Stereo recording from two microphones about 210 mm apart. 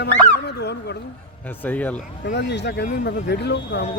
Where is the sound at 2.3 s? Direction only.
55° left (ahead or behind).